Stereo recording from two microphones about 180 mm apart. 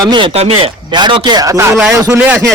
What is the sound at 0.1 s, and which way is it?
A man's voice, 30° right (ahead or behind).